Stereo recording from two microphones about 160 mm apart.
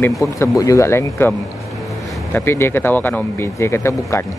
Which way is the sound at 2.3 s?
15° left (ahead or behind).